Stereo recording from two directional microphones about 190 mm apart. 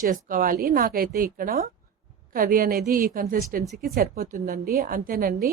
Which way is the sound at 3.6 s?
Centre (ahead or behind).